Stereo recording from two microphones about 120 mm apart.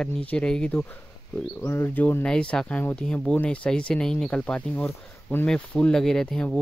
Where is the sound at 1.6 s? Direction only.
20° left (ahead or behind).